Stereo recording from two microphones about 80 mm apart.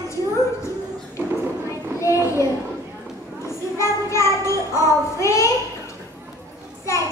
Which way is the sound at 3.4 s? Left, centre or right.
Left.